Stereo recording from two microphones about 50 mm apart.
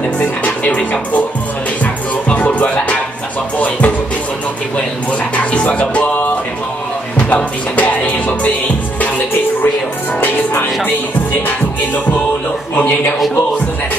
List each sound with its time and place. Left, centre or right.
0.2 s music: left
5.3 s music: left
7.3 s music: left
12.7 s a man's voice: left